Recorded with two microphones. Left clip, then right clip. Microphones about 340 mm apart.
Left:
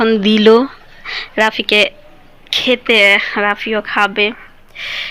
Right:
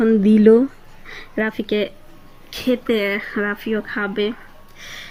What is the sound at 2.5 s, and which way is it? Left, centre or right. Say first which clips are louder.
Speech: left 8 dB; centre.